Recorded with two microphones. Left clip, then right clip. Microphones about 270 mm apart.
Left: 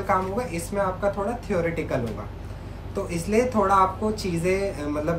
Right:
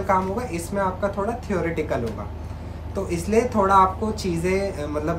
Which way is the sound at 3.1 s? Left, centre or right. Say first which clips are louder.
Right 2 dB; centre.